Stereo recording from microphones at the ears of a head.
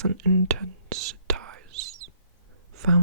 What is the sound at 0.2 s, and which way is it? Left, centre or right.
Whispering, right.